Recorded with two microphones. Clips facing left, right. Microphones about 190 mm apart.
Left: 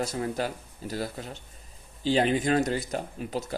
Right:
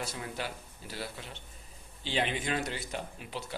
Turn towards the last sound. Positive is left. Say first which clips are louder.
# left 8 dB
turn(degrees=40)  # may be behind; listen again after turning